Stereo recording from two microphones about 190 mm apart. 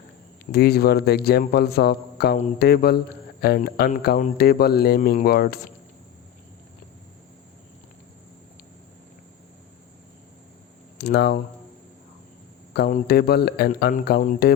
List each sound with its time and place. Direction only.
0.5 s speech: 55° left (ahead or behind)
10.9 s speech: 60° left (ahead or behind)
12.7 s speech: 55° left (ahead or behind)